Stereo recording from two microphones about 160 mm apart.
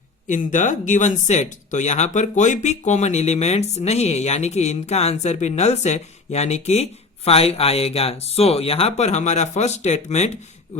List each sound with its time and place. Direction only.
0.3 s speech: 50° left (ahead or behind)